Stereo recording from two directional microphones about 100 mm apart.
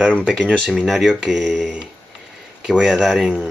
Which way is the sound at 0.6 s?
Centre (ahead or behind).